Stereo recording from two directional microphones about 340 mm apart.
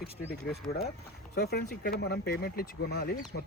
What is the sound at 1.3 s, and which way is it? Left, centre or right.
Speech, left.